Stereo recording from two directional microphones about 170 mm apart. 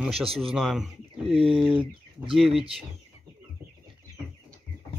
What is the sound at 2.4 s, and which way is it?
Speech, centre (ahead or behind).